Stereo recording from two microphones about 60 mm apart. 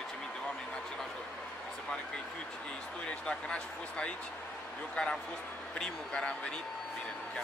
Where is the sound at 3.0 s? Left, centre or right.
Centre.